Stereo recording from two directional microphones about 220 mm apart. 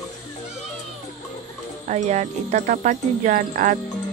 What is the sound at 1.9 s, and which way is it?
Speech, 30° right (ahead or behind).